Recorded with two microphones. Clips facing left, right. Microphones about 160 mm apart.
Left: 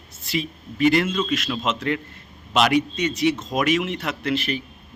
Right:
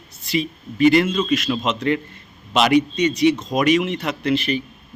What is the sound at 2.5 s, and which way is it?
A man's voice, centre (ahead or behind).